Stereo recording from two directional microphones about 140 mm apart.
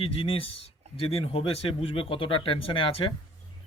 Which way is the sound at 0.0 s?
40° left (ahead or behind).